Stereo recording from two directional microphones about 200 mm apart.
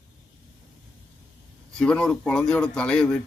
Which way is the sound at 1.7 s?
5° left (ahead or behind).